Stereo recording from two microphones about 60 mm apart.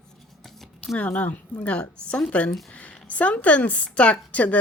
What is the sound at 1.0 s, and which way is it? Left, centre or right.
A woman's voice, left.